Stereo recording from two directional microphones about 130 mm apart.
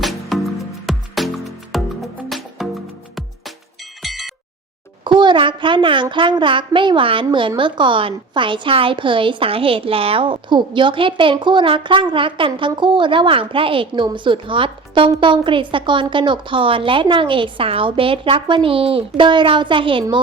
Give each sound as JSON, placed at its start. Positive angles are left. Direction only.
{"t": 0.0, "sound": "music", "side_deg": 0}
{"t": 4.0, "sound": "music", "side_deg": 0}
{"t": 5.0, "sound": "a woman's voice", "side_deg": -35}